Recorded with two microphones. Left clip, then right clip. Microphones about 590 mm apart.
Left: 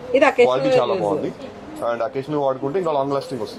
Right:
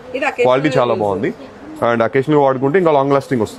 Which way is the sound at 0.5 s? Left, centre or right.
Right.